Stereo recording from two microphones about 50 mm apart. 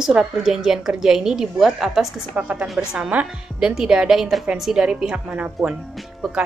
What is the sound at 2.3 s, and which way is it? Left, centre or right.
A woman's voice, right.